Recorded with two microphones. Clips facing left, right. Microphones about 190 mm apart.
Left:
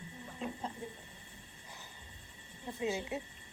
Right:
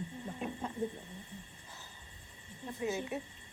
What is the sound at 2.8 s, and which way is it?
Speech, 20° left (ahead or behind).